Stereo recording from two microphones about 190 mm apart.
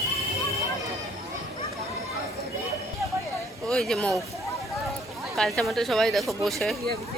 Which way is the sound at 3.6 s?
Centre (ahead or behind).